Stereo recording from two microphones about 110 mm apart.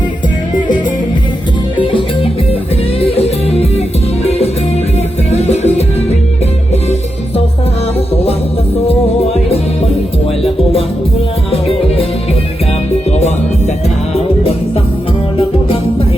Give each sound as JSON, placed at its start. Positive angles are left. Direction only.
{"t": 1.8, "sound": "music", "side_deg": 55}
{"t": 5.3, "sound": "music", "side_deg": 80}
{"t": 8.1, "sound": "music", "side_deg": 65}
{"t": 13.1, "sound": "music", "side_deg": 90}
{"t": 15.4, "sound": "music", "side_deg": 60}